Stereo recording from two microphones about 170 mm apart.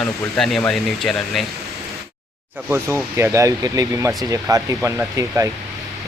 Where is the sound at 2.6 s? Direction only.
15° right (ahead or behind).